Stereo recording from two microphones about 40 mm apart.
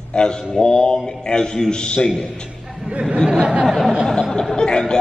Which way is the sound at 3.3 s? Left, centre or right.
Right.